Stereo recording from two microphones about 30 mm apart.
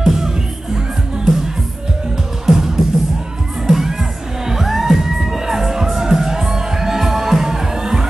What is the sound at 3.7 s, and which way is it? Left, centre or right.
Music, centre.